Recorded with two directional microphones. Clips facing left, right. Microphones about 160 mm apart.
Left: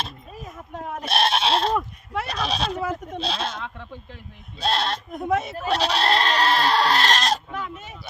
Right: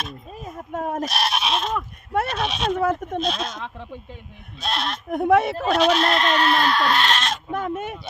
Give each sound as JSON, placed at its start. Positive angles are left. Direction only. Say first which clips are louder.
{"t": 0.7, "sound": "speech", "louder": "right 7 dB", "side_deg": -45}
{"t": 1.0, "sound": "goat", "louder": "left 2 dB", "side_deg": 30}
{"t": 2.2, "sound": "speech", "louder": "right 2 dB", "side_deg": 35}
{"t": 2.7, "sound": "speech", "louder": "right 6 dB", "side_deg": -55}
{"t": 3.2, "sound": "speech", "louder": "right 2 dB", "side_deg": 30}
{"t": 4.6, "sound": "speech", "louder": "left 3 dB", "side_deg": 30}
{"t": 5.1, "sound": "speech", "louder": "right 8 dB", "side_deg": -65}
{"t": 5.7, "sound": "speech", "louder": "right 2 dB", "side_deg": 35}
{"t": 7.5, "sound": "a sound", "louder": "right 7 dB", "side_deg": -50}